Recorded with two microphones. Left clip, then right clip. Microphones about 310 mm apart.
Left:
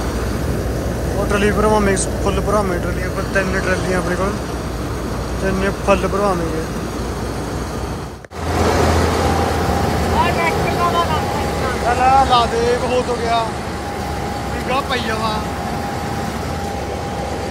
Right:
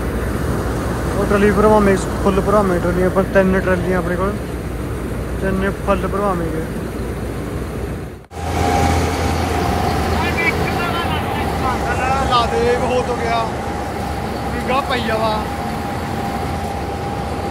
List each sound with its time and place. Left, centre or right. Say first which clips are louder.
1.3 s speech: right 3 dB; centre
5.6 s speech: left 4 dB; centre
12.0 s speech: left 5 dB; centre
14.7 s speech: right 1 dB; centre